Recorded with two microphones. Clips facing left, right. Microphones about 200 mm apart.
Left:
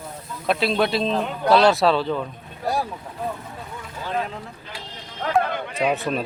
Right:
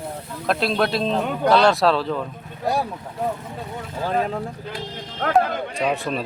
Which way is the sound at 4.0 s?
40° right (ahead or behind).